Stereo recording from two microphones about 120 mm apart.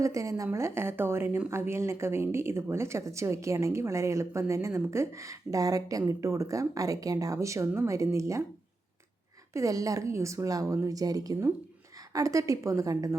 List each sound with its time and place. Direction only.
0.0 s speech: 25° right (ahead or behind)
9.5 s speech: 25° right (ahead or behind)